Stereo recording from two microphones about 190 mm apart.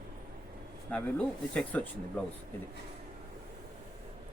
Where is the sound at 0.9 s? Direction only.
5° left (ahead or behind).